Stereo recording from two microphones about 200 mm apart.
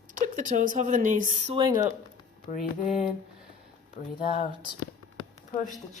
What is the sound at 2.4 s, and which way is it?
Speech, 40° left (ahead or behind).